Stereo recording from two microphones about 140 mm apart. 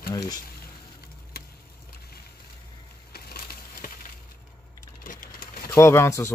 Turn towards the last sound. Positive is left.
turn(degrees=20)  # may be behind; listen again after turning